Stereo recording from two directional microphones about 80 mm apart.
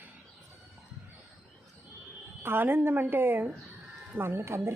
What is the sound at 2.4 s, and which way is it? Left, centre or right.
A woman's voice, right.